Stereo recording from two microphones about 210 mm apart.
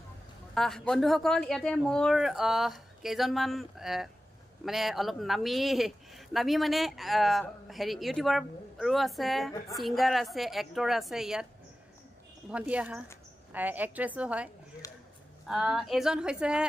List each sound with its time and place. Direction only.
0.6 s speech: centre (ahead or behind)
12.4 s a woman's voice: 5° right (ahead or behind)
14.8 s a sound: 15° left (ahead or behind)
15.4 s speech: centre (ahead or behind)